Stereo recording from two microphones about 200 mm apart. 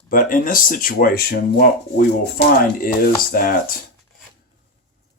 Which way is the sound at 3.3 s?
45° left (ahead or behind).